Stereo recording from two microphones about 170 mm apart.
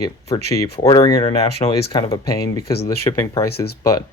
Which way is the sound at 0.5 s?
20° left (ahead or behind).